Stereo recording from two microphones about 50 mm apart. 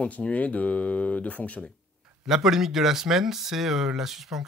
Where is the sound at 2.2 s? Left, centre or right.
Centre.